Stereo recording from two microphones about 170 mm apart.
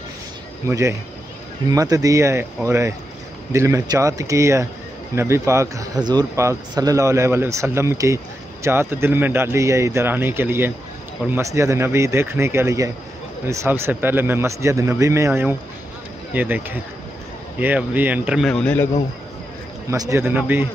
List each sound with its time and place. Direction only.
0.7 s speech: 15° right (ahead or behind); by 18.9 s 5° left (ahead or behind)
19.9 s speech: 15° right (ahead or behind)